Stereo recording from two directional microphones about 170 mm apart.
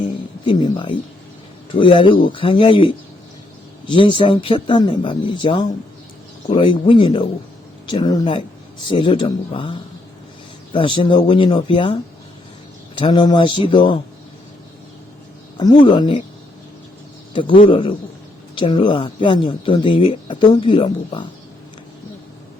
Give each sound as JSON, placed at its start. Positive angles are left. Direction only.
{"t": 0.4, "sound": "speech", "side_deg": 25}
{"t": 13.0, "sound": "speech", "side_deg": 25}
{"t": 15.5, "sound": "speech", "side_deg": 25}
{"t": 17.7, "sound": "speech", "side_deg": 30}